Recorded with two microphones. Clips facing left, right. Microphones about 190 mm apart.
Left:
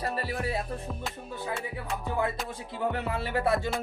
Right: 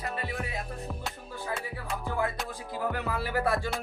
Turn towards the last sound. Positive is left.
turn(degrees=25)  # may be behind; listen again after turning